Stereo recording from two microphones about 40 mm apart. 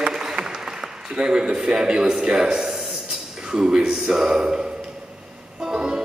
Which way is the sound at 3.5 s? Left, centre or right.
Centre.